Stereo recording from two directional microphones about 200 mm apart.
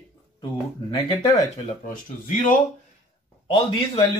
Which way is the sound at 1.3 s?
35° left (ahead or behind).